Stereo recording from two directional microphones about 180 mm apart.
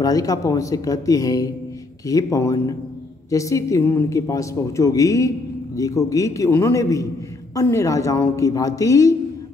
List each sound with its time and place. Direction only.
0.0 s a woman's voice: 20° left (ahead or behind)